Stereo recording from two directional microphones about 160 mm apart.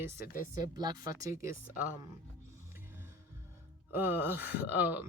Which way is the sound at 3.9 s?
15° right (ahead or behind).